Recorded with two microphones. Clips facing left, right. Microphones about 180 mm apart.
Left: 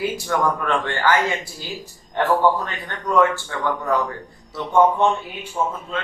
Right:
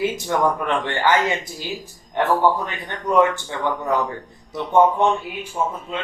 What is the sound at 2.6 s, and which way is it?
A man's voice, 20° right (ahead or behind).